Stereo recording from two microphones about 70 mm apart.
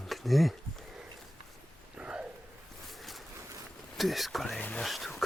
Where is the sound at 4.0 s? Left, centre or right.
Centre.